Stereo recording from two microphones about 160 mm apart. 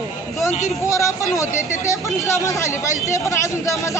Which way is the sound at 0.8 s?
20° left (ahead or behind).